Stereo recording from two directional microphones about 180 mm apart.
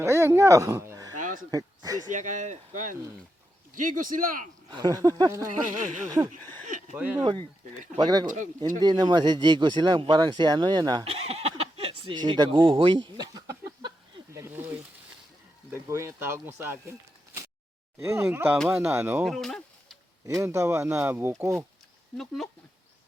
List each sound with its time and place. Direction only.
0.0 s speech: 15° right (ahead or behind)
1.1 s neigh: 45° right (ahead or behind)
1.5 s speech: 20° right (ahead or behind)
2.0 s speech: 45° right (ahead or behind)
4.7 s speech: 20° right (ahead or behind)
6.9 s speech: 10° right (ahead or behind)
7.9 s speech: 20° right (ahead or behind)
8.3 s speech: 45° right (ahead or behind)
8.8 s speech: 25° right (ahead or behind)
14.3 s snake: 15° right (ahead or behind)
15.7 s speech: 15° right (ahead or behind)
18.0 s speech: 15° right (ahead or behind)
19.3 s a sound: centre (ahead or behind)
20.2 s speech: 15° right (ahead or behind)